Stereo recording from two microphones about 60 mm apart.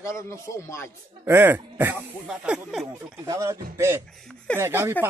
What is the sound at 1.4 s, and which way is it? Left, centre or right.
Speech, right.